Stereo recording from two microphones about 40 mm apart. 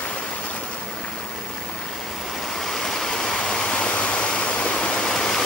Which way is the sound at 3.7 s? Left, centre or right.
Left.